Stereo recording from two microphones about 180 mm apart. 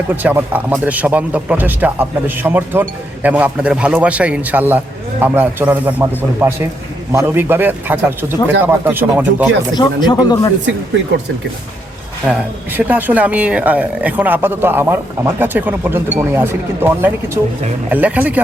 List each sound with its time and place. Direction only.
0.2 s speech: 10° right (ahead or behind)
9.7 s speech: 25° left (ahead or behind)
12.3 s speech: 10° right (ahead or behind)